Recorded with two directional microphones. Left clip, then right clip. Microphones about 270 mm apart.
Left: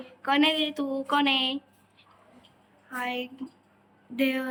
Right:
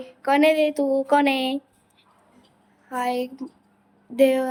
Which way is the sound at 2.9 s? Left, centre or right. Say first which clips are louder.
Right 7 dB; centre.